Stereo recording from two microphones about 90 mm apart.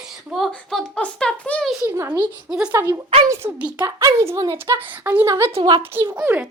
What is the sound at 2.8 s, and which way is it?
A woman's voice, 30° right (ahead or behind).